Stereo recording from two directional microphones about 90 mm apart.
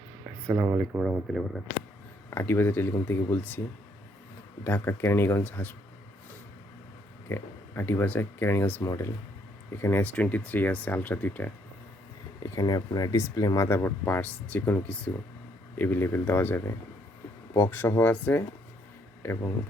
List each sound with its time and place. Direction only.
0.4 s speech: 30° right (ahead or behind)
0.9 s speech: 10° right (ahead or behind)
1.3 s speech: centre (ahead or behind)
2.3 s speech: 25° left (ahead or behind)
4.6 s speech: 25° left (ahead or behind)
7.3 s speech: 25° left (ahead or behind)
12.4 s speech: 45° left (ahead or behind); by 18.4 s 20° left (ahead or behind)